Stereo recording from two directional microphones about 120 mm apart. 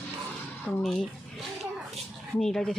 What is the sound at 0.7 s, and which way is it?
Speech, centre (ahead or behind).